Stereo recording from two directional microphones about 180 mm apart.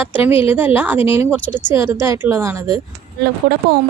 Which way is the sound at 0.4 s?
10° right (ahead or behind).